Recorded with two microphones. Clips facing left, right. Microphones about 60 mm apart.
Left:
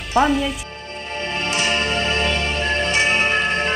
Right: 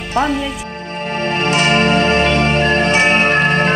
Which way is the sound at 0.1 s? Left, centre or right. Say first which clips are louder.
Even; centre.